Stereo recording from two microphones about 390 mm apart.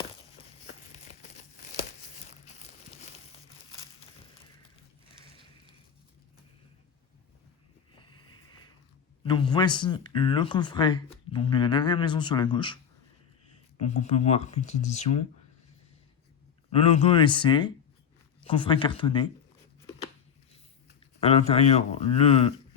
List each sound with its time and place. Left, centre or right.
9.2 s speech: centre
16.7 s speech: centre
21.2 s speech: centre